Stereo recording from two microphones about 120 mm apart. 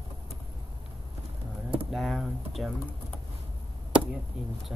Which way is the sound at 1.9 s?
Centre (ahead or behind).